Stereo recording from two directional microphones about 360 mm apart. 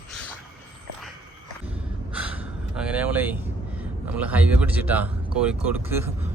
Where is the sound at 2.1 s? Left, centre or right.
Centre.